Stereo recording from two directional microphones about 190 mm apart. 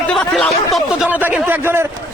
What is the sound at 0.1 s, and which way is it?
Speech, 5° left (ahead or behind).